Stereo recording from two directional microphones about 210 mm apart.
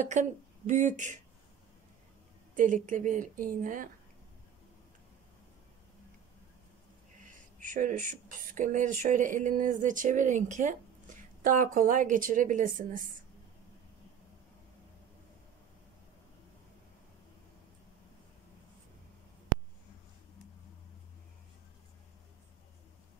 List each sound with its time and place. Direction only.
0.0 s speech: 35° right (ahead or behind)
2.5 s speech: 35° right (ahead or behind)
7.2 s speech: 40° right (ahead or behind)